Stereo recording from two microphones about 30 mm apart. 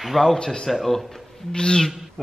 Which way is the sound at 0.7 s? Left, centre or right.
Centre.